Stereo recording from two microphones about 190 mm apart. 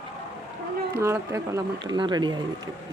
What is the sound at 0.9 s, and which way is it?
Speech, 15° right (ahead or behind).